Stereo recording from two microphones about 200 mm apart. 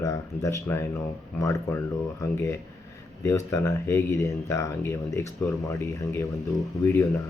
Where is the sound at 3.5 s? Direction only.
15° left (ahead or behind).